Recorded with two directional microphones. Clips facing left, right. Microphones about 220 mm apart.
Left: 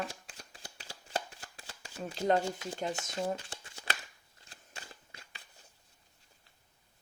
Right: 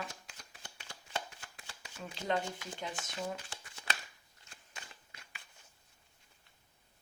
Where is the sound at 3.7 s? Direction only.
30° left (ahead or behind).